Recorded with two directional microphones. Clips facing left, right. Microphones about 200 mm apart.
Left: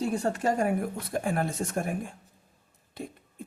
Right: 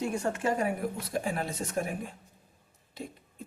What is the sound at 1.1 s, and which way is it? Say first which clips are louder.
A man's voice: left 6 dB; 55° left (ahead or behind).